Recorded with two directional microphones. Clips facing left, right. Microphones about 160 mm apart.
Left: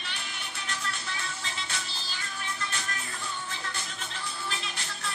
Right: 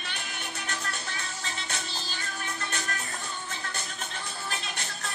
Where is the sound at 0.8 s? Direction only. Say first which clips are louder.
Even; 40° right (ahead or behind).